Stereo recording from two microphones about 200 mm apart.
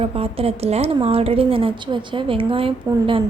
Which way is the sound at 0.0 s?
30° right (ahead or behind).